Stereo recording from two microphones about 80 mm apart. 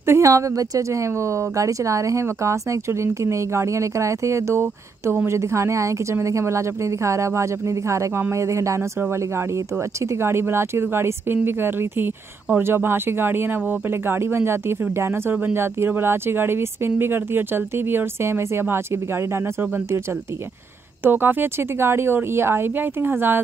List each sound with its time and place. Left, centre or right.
0.0 s speech: right
10.0 s speech: right
21.0 s speech: right